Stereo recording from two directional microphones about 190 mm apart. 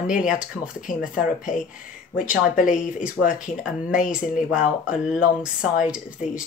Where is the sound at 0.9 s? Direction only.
45° left (ahead or behind).